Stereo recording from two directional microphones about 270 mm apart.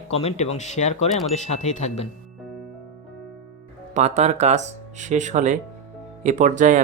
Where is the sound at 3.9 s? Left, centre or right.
Right.